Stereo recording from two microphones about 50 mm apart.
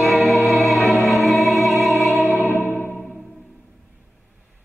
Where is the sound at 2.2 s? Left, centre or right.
Left.